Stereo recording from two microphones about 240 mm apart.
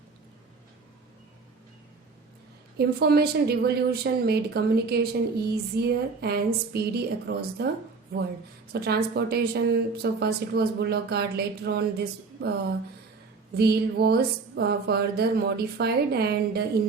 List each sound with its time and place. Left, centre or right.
2.7 s a woman's voice: right
8.7 s a woman's voice: right
13.6 s a woman's voice: right